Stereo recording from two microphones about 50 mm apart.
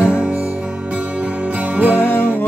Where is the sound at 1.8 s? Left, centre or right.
Right.